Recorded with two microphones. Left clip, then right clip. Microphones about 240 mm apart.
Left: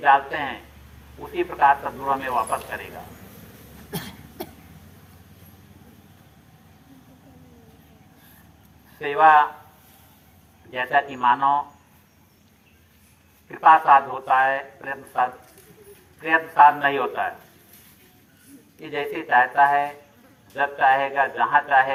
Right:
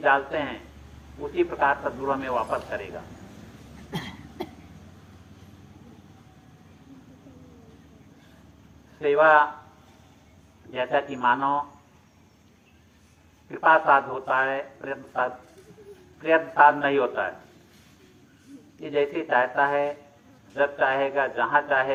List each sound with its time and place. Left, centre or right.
0.0 s speech: left
3.9 s cough: centre
9.0 s speech: left
10.7 s speech: left
13.7 s speech: left
18.8 s speech: left